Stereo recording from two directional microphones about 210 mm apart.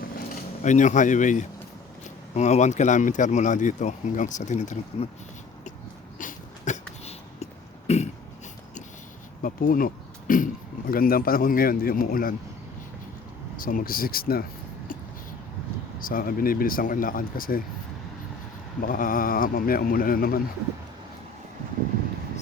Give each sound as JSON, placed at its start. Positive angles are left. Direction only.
{"t": 0.6, "sound": "speech", "side_deg": 35}
{"t": 6.1, "sound": "a sound", "side_deg": 35}
{"t": 9.4, "sound": "speech", "side_deg": 40}
{"t": 13.6, "sound": "speech", "side_deg": 40}
{"t": 16.0, "sound": "speech", "side_deg": 45}
{"t": 18.8, "sound": "speech", "side_deg": 40}